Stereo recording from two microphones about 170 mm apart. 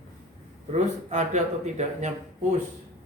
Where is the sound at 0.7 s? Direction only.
45° right (ahead or behind).